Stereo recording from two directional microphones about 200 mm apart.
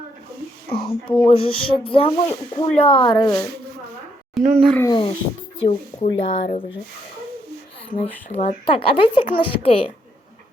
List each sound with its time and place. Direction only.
0.7 s speech: 25° left (ahead or behind)
4.4 s speech: 5° left (ahead or behind)
4.9 s speech: 20° left (ahead or behind)
8.3 s speech: 35° left (ahead or behind)